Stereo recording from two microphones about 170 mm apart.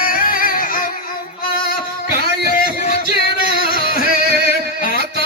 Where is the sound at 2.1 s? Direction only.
60° left (ahead or behind).